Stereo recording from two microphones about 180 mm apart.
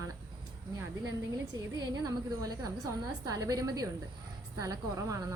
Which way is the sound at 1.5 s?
20° right (ahead or behind).